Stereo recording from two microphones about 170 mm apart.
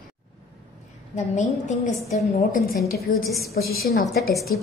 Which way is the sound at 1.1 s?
45° left (ahead or behind).